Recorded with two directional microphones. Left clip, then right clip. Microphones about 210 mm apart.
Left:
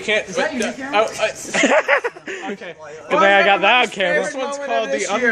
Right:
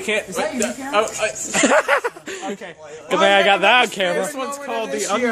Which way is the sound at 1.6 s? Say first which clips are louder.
Left 1 dB; 15° right (ahead or behind).